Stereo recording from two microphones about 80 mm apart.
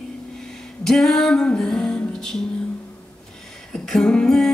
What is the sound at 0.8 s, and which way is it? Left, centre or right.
Music, centre.